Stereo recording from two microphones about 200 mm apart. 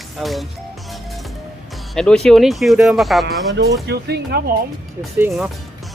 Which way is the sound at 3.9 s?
55° right (ahead or behind).